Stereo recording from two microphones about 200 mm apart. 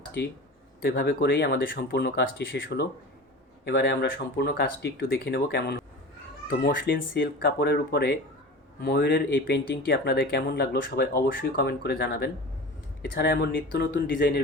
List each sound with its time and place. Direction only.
0.8 s speech: 50° left (ahead or behind)